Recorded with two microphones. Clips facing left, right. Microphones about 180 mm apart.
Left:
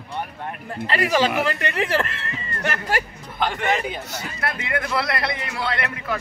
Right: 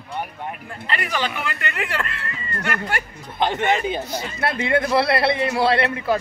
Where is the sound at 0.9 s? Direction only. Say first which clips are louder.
Left 5 dB; 40° left (ahead or behind).